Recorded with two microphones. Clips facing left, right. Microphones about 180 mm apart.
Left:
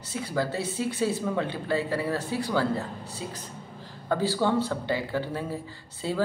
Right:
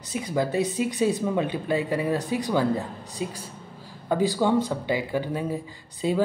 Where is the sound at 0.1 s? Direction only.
15° right (ahead or behind).